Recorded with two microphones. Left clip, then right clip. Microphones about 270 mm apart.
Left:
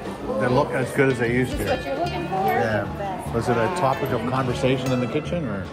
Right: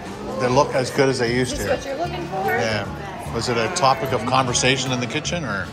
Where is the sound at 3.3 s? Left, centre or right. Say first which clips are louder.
Right 1 dB; centre.